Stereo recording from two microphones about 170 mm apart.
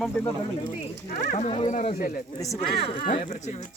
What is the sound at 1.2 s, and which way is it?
Speech, 45° left (ahead or behind).